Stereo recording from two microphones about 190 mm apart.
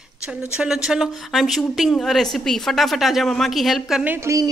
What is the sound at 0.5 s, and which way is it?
Speech, 5° right (ahead or behind).